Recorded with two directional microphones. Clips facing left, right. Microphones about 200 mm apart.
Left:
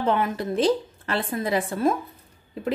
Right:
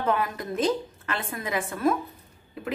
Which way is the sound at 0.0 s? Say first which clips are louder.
Left 3 dB; 25° left (ahead or behind).